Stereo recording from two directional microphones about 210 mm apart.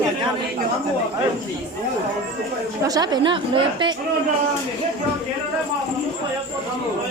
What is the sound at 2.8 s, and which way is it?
A woman's voice, 20° right (ahead or behind).